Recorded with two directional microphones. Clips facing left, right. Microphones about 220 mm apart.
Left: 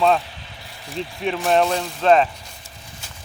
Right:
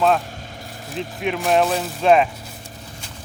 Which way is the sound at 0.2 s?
45° right (ahead or behind).